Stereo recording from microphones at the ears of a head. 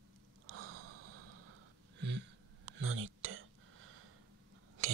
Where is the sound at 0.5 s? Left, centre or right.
Right.